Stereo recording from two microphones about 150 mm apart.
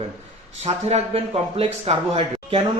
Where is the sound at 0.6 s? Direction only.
45° right (ahead or behind).